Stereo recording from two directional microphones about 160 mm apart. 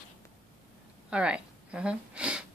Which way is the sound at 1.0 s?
5° right (ahead or behind).